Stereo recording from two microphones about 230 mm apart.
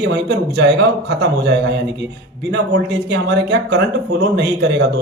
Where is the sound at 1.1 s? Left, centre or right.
Right.